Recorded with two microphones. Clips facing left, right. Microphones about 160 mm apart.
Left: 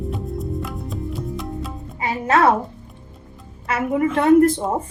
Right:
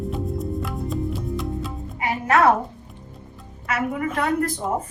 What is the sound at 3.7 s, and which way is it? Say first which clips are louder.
Speech: left 5 dB; 30° left (ahead or behind).